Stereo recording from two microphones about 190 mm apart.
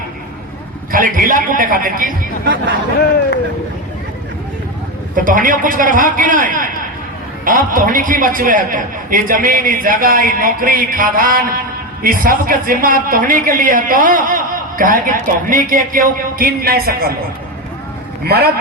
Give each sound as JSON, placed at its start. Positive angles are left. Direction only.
{"t": 0.9, "sound": "speech", "side_deg": -50}
{"t": 5.1, "sound": "speech", "side_deg": -45}